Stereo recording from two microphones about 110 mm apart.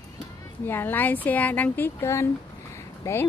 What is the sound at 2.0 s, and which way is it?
A woman's voice, 25° left (ahead or behind).